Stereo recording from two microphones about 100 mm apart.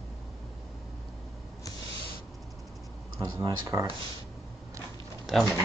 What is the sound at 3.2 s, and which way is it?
Speech, 50° right (ahead or behind).